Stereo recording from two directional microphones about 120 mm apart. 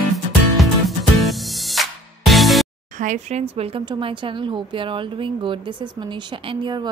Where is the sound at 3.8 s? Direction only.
45° right (ahead or behind).